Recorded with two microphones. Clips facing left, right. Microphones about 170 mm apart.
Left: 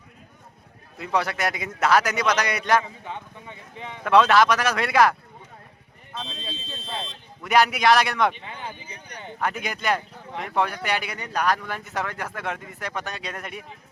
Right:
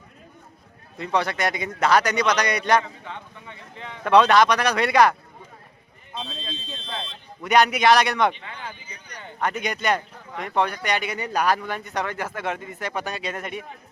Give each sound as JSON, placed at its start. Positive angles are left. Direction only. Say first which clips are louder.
{"t": 0.9, "sound": "speech", "louder": "right 1 dB", "side_deg": 5}
{"t": 2.8, "sound": "speech", "louder": "left 1 dB", "side_deg": 15}
{"t": 4.0, "sound": "speech", "louder": "right 1 dB", "side_deg": 0}
{"t": 7.4, "sound": "speech", "louder": "right 1 dB", "side_deg": 0}
{"t": 8.4, "sound": "a sound", "louder": "left 1 dB", "side_deg": 20}
{"t": 9.4, "sound": "speech", "louder": "right 2 dB", "side_deg": 0}